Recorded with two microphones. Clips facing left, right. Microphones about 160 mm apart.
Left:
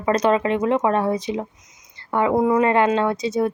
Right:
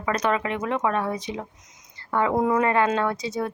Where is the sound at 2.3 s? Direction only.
5° left (ahead or behind).